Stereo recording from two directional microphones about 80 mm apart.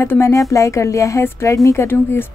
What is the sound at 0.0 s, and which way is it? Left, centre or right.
Speech, left.